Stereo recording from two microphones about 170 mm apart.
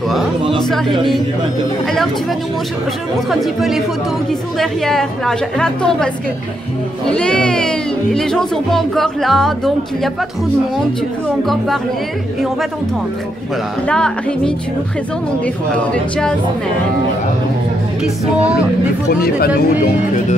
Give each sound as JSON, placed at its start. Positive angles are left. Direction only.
{"t": 0.6, "sound": "speech", "side_deg": 5}
{"t": 3.3, "sound": "speech", "side_deg": 0}
{"t": 7.1, "sound": "speech", "side_deg": 5}
{"t": 13.8, "sound": "speech", "side_deg": 5}
{"t": 18.0, "sound": "speech", "side_deg": -5}
{"t": 19.0, "sound": "speech", "side_deg": 65}